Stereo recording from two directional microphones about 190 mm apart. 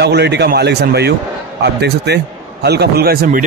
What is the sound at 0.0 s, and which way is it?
A man's voice, 60° right (ahead or behind).